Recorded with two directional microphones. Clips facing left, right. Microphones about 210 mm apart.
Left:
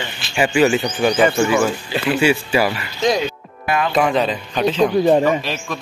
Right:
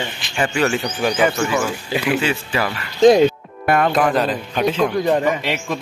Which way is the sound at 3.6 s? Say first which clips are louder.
Right 3 dB; 55° right (ahead or behind).